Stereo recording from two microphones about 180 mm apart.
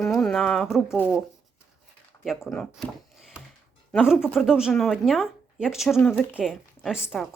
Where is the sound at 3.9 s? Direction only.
Centre (ahead or behind).